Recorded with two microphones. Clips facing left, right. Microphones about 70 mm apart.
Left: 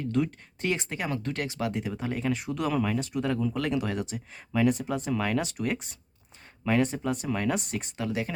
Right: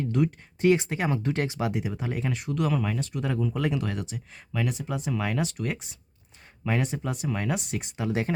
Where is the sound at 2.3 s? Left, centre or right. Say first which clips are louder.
Right 1 dB; centre.